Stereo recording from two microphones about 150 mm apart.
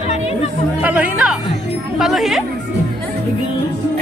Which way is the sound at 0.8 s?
10° right (ahead or behind).